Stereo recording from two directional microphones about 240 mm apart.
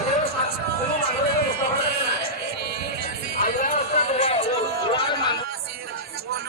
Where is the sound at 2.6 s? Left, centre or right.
Right.